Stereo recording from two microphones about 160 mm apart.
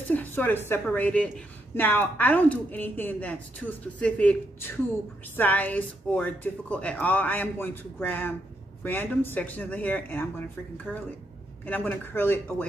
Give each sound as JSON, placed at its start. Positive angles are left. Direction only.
{"t": 0.1, "sound": "a woman's voice", "side_deg": 10}
{"t": 11.6, "sound": "a woman's voice", "side_deg": 10}